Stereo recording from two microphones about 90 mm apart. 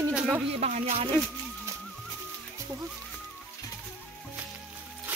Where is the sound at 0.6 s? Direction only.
90° right.